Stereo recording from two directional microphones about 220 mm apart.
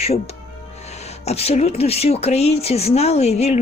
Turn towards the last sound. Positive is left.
turn(degrees=30)  # may be behind; listen again after turning